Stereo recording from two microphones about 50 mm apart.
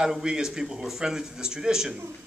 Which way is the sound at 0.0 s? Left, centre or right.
Centre.